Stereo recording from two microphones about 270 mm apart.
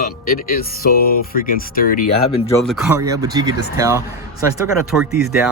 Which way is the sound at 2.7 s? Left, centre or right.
Centre.